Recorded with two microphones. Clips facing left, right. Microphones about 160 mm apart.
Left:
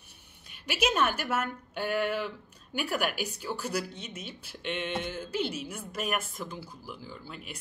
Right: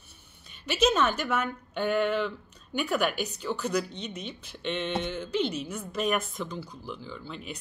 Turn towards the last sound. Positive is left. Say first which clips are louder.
# right 4 dB
turn(degrees=5)  # may be behind; listen again after turning